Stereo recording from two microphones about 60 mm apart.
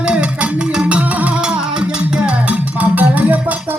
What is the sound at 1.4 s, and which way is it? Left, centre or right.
Music, centre.